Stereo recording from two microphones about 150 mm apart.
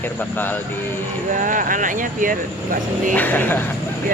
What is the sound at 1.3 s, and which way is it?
Speech, 60° right (ahead or behind).